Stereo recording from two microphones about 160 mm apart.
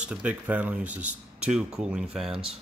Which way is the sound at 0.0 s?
10° right (ahead or behind).